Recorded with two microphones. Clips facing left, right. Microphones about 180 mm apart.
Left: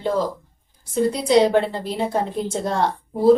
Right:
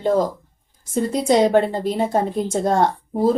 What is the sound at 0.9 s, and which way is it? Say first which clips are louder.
A woman's voice: right 1 dB; 45° right (ahead or behind).